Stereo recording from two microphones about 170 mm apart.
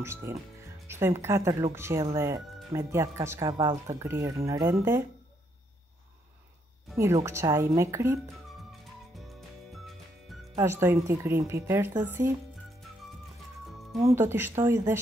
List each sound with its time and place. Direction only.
0.0 s speech: 15° right (ahead or behind)
7.2 s speech: 15° right (ahead or behind)
9.1 s music: centre (ahead or behind)
10.5 s speech: 15° right (ahead or behind)
14.1 s speech: 15° right (ahead or behind)